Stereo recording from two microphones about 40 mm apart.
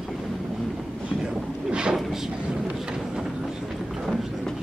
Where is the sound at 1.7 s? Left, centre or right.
Right.